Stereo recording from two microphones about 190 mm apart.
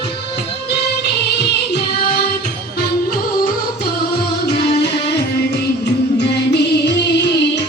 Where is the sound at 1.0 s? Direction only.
60° left (ahead or behind).